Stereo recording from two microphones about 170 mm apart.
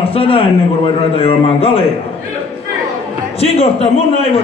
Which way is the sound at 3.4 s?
35° left (ahead or behind).